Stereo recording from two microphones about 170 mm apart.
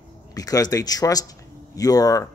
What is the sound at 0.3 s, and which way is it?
Speech, 20° left (ahead or behind).